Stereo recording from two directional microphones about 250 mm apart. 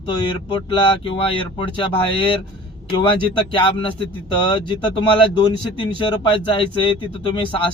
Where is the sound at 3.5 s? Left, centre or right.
Centre.